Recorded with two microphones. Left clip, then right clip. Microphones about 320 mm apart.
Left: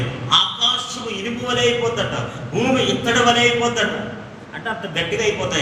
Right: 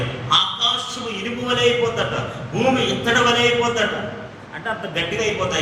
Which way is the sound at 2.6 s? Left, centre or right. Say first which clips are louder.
Even; left.